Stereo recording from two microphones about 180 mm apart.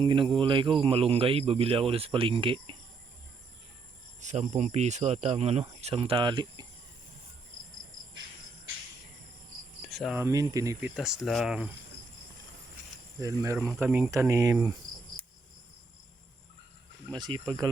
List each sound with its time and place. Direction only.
0.0 s speech: 25° right (ahead or behind)
4.2 s speech: 40° right (ahead or behind); by 6.7 s 25° right (ahead or behind)
9.9 s speech: centre (ahead or behind)
10.2 s speech: 15° right (ahead or behind)
13.1 s speech: 15° right (ahead or behind)
17.1 s speech: 25° right (ahead or behind)